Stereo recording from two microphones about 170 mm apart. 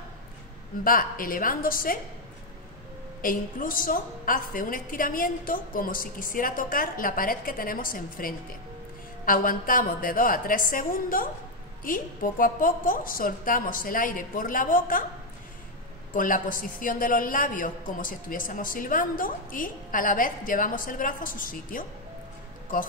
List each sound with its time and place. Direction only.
0.8 s a woman's voice: 55° left (ahead or behind)
3.2 s a woman's voice: 55° left (ahead or behind)
16.1 s a woman's voice: 50° left (ahead or behind)